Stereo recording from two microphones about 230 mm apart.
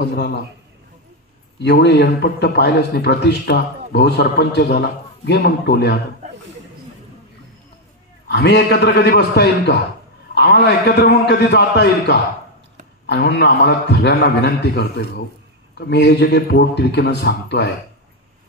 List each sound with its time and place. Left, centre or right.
0.0 s a man's voice: left
1.6 s a man's voice: left
8.3 s a man's voice: left